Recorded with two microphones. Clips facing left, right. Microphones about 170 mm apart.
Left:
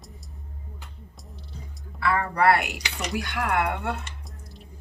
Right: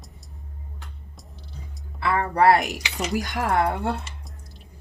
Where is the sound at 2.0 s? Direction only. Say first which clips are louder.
Right 3 dB; 25° right (ahead or behind).